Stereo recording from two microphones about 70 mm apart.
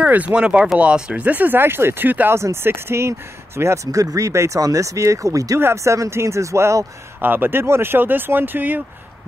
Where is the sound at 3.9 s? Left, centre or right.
Right.